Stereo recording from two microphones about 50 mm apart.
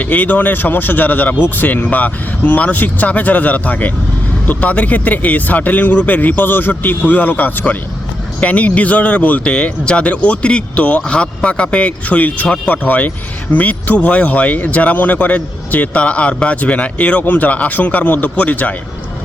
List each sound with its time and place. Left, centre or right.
0.0 s speech: left